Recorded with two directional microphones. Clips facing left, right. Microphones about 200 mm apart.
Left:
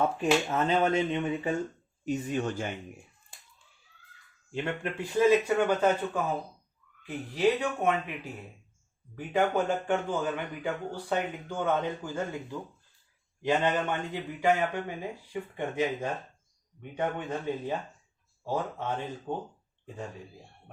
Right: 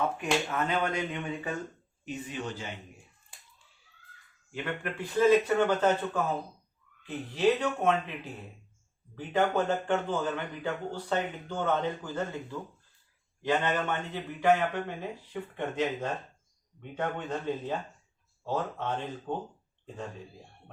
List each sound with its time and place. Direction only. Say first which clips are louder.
0.5 s speech: left 4 dB; 25° left (ahead or behind)
2.0 s speech: left 6 dB; 45° left (ahead or behind)
4.5 s speech: left 3 dB; 25° left (ahead or behind)
4.9 s speech: even; 10° left (ahead or behind)